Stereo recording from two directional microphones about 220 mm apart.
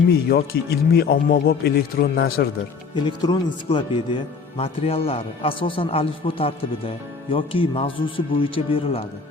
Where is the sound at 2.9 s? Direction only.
20° left (ahead or behind).